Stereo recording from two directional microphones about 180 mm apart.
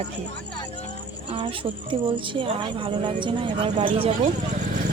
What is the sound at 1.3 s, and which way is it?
Speech, 30° right (ahead or behind).